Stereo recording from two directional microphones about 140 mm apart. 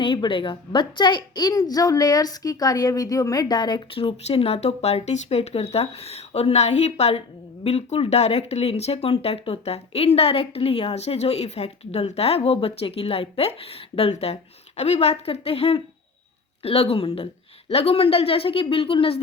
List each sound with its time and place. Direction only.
0.0 s a woman's voice: 40° left (ahead or behind)